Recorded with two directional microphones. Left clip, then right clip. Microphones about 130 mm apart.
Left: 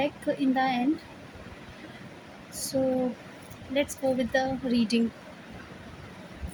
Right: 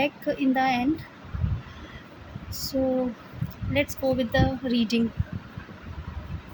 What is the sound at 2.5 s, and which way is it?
A woman's voice, 45° right (ahead or behind).